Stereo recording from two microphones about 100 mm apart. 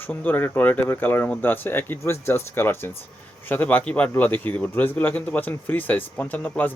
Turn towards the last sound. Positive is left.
turn(degrees=15)  # may be behind; listen again after turning